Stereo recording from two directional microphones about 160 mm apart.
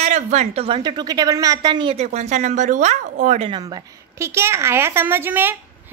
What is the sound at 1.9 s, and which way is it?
Speech, 45° right (ahead or behind).